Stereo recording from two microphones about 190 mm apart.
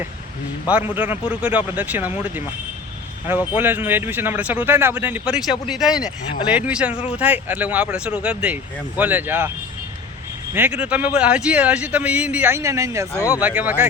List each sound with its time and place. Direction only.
0.9 s speech: 10° right (ahead or behind)
10.5 s speech: 10° right (ahead or behind)
13.1 s speech: 15° left (ahead or behind)
13.4 s speech: 10° right (ahead or behind)